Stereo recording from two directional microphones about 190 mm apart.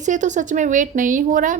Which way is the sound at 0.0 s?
40° right (ahead or behind).